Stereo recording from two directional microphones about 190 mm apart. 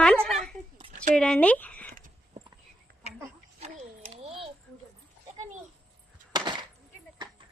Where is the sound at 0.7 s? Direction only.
40° right (ahead or behind).